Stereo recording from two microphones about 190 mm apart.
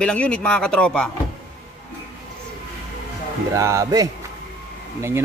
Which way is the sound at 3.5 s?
15° right (ahead or behind).